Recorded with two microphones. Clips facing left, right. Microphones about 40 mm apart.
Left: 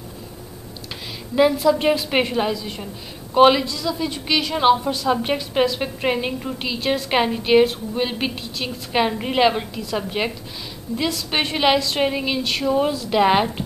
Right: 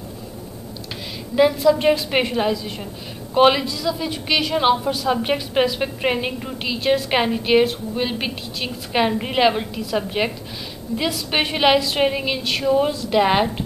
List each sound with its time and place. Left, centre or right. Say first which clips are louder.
1.3 s a woman's voice: right 1 dB; centre